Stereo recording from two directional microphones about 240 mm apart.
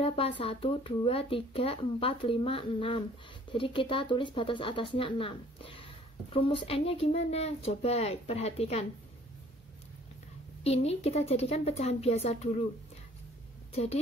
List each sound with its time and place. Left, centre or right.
0.0 s speech: left
10.6 s speech: left